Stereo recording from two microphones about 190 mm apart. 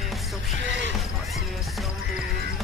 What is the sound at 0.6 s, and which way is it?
Speech, 70° right (ahead or behind).